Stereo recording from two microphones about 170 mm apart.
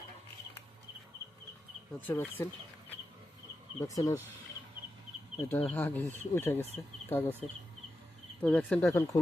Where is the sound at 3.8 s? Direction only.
20° left (ahead or behind).